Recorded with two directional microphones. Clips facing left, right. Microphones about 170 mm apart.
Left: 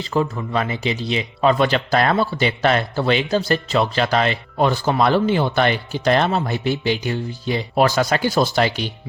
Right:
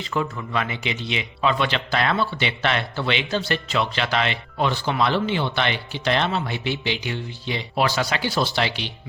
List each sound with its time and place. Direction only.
0.1 s speech: 35° left (ahead or behind)